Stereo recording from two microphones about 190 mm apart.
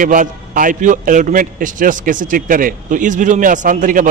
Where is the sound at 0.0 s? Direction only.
45° right (ahead or behind).